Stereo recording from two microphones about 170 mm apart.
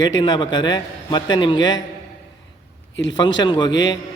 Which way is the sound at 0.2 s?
25° left (ahead or behind).